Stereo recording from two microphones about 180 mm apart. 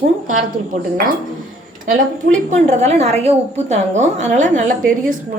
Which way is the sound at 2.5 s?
40° right (ahead or behind).